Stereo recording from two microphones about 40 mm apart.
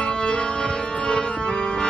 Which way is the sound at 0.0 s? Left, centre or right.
Left.